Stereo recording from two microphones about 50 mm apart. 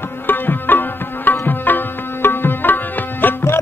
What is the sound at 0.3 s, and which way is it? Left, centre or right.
Tabla, left.